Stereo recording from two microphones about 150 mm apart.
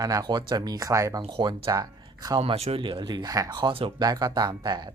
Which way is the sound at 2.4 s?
45° right (ahead or behind).